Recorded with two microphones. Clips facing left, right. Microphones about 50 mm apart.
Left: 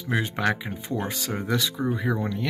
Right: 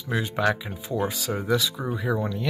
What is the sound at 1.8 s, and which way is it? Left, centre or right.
Speech, centre.